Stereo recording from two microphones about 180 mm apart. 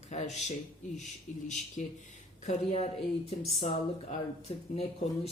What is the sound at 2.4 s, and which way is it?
Speech, 40° left (ahead or behind).